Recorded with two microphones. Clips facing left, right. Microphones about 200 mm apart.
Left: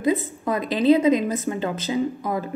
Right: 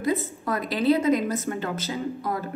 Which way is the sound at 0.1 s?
20° left (ahead or behind).